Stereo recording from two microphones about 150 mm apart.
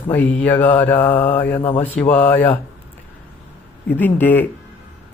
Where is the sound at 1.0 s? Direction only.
35° left (ahead or behind).